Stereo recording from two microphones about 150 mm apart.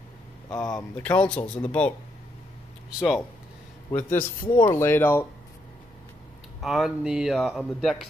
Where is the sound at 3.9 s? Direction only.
20° left (ahead or behind).